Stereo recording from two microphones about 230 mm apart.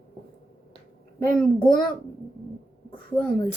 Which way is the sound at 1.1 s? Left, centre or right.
Centre.